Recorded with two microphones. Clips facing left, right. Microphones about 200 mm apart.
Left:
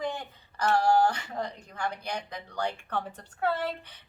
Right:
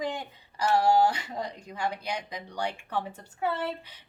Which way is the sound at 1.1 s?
10° right (ahead or behind).